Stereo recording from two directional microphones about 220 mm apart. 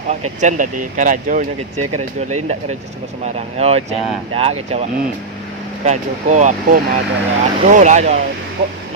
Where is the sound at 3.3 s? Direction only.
30° right (ahead or behind).